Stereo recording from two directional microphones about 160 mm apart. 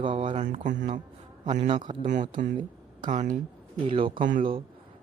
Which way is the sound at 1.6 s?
30° right (ahead or behind).